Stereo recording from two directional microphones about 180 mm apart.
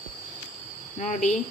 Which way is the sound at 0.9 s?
45° left (ahead or behind).